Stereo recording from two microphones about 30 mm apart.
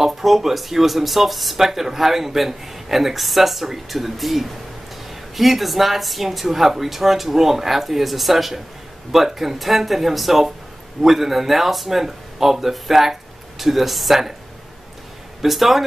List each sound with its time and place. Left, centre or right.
0.0 s speech: centre
15.4 s speech: centre